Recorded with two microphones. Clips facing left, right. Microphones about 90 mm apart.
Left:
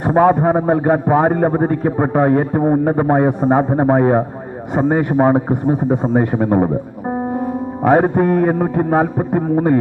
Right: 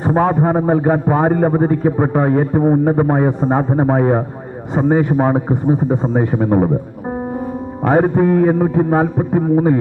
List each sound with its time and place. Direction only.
0.0 s a man's voice: 10° left (ahead or behind)
7.9 s a man's voice: 15° left (ahead or behind)